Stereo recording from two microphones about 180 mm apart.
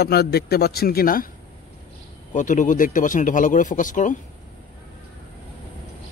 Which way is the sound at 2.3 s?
45° left (ahead or behind).